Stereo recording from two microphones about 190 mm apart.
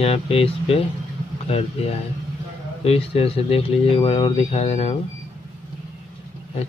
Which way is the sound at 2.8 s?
30° left (ahead or behind).